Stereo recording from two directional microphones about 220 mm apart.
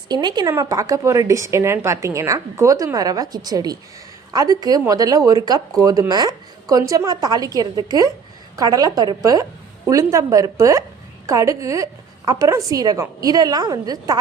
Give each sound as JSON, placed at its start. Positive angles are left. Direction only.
{"t": 0.1, "sound": "speech", "side_deg": -20}